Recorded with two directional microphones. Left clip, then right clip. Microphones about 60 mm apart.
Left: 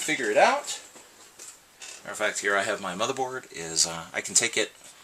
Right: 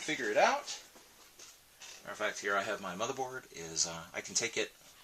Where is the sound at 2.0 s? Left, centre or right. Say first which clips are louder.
Left 8 dB; left.